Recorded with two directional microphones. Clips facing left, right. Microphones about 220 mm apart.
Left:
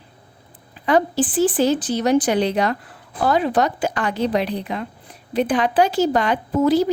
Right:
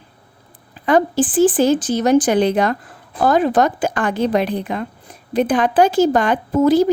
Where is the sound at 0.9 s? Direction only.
50° right (ahead or behind).